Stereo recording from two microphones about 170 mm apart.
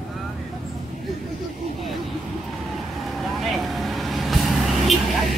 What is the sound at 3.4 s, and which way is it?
Vehicle, centre (ahead or behind).